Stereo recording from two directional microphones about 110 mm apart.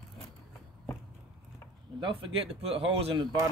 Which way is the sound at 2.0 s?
55° right (ahead or behind).